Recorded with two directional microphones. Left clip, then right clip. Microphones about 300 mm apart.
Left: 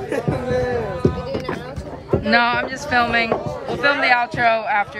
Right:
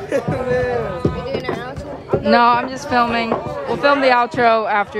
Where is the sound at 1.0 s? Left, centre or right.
Left.